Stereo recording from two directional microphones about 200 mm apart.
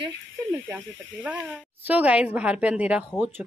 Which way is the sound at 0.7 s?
10° right (ahead or behind).